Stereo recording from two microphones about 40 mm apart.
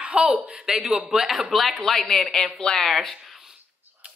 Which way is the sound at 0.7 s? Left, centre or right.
Centre.